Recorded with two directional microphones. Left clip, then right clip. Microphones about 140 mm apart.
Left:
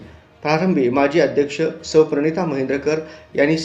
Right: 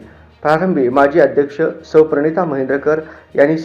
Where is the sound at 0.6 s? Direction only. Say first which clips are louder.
Right 3 dB; 35° left (ahead or behind).